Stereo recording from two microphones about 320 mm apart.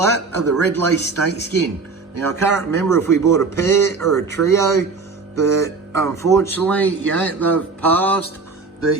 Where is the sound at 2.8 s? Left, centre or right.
Centre.